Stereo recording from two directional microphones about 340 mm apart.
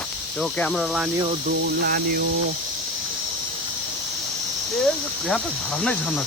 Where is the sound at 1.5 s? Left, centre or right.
Right.